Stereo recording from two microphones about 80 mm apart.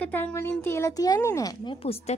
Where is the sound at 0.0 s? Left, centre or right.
Left.